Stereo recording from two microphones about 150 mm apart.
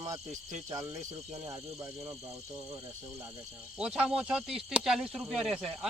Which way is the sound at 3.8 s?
5° right (ahead or behind).